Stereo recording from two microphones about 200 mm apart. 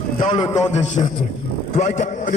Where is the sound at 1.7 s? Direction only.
40° left (ahead or behind).